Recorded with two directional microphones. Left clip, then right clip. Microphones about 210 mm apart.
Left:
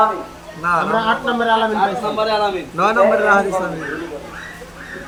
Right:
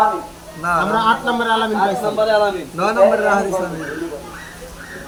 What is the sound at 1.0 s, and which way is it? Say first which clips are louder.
Speech: right 1 dB; 40° right (ahead or behind).